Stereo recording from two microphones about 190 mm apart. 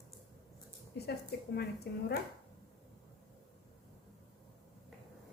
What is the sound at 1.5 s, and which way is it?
Speech, 60° left (ahead or behind).